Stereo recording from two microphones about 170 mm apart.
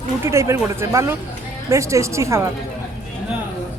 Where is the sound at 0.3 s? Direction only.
15° right (ahead or behind).